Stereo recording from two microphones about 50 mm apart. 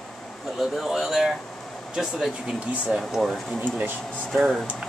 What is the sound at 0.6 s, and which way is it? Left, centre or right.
A man's voice, centre.